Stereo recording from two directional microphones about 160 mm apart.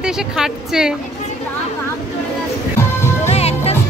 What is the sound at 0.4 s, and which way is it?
Speech, 5° right (ahead or behind).